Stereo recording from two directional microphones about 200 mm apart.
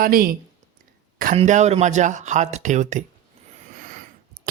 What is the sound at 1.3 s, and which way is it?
Speech, 35° right (ahead or behind).